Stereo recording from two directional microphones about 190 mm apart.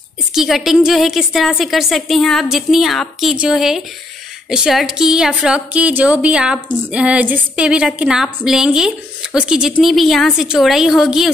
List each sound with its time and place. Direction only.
0.3 s a woman's voice: centre (ahead or behind)